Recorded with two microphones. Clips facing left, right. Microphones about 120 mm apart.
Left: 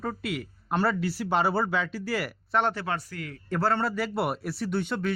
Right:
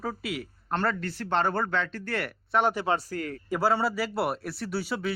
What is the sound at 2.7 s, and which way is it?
Speech, 25° right (ahead or behind).